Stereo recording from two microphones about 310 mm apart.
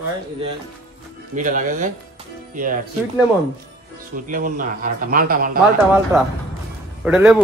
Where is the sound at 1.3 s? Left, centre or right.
Right.